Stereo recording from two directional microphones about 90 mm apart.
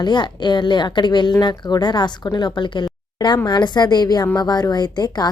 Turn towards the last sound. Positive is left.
turn(degrees=50)  # may be behind; listen again after turning